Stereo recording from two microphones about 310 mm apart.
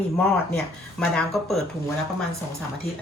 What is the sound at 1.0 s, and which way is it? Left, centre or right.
Speech, centre.